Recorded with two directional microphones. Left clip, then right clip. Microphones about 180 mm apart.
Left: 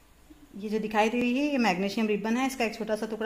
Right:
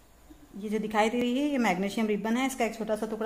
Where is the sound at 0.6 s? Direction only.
30° left (ahead or behind).